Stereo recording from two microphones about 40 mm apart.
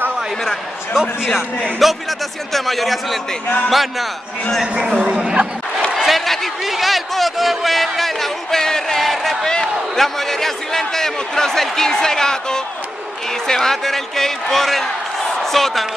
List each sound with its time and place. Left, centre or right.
1.0 s a man's voice: centre
1.3 s a man's voice: centre
5.1 s speech: centre
6.0 s a sound: centre
9.4 s a sound: centre
9.9 s a man's voice: centre